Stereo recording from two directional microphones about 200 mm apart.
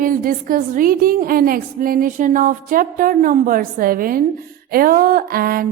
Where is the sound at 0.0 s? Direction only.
45° right (ahead or behind).